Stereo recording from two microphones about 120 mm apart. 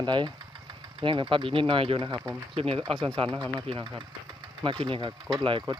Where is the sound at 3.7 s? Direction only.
50° right (ahead or behind).